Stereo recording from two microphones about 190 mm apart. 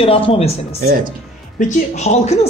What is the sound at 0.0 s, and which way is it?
Speech, 30° left (ahead or behind).